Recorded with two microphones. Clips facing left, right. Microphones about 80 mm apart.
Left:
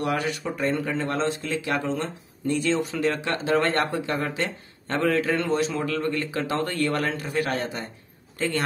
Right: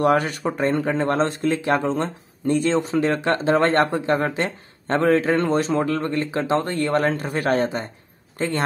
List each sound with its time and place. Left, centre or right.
0.0 s speech: right